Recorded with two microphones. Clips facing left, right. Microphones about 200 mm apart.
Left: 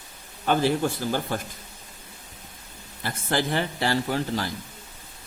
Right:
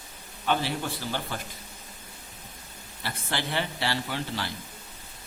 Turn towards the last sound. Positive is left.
turn(degrees=45)  # may be behind; listen again after turning